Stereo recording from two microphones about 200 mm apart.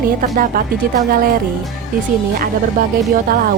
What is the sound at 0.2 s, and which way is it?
Speech, 45° right (ahead or behind).